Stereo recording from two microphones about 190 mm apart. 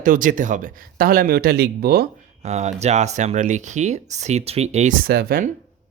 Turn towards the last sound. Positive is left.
turn(degrees=-55)  # may be behind; listen again after turning